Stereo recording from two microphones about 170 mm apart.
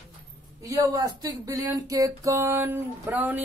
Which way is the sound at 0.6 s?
20° right (ahead or behind).